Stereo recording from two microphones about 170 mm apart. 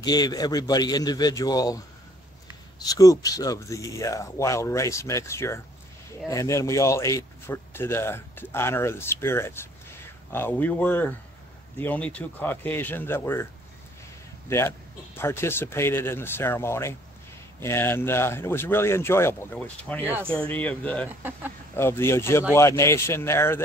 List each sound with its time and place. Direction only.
0.0 s speech: 25° left (ahead or behind)
2.8 s speech: 20° left (ahead or behind)
15.1 s speech: 15° left (ahead or behind)